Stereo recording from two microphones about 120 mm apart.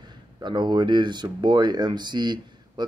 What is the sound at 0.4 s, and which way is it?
Speech, 40° right (ahead or behind).